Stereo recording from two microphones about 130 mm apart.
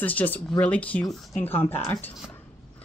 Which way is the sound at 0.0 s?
10° left (ahead or behind).